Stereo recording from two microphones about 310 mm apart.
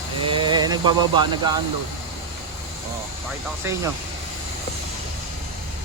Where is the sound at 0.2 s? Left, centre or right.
Centre.